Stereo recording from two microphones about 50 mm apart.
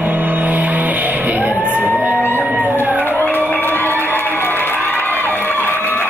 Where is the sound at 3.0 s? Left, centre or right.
Left.